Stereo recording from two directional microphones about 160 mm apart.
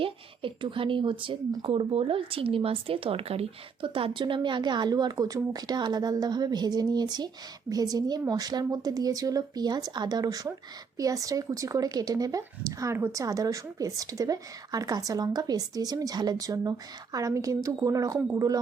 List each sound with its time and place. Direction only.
0.0 s a woman's voice: 35° right (ahead or behind)